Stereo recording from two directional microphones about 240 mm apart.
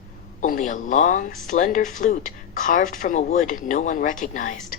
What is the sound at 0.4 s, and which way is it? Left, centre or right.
A woman's voice, left.